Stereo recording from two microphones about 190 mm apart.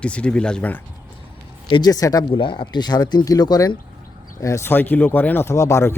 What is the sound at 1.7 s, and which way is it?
Speech, 20° left (ahead or behind).